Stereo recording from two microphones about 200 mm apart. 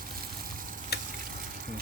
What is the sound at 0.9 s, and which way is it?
Frying, 50° left (ahead or behind).